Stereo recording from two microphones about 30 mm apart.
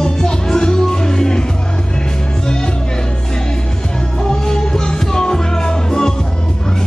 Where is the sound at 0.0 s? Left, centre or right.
Left.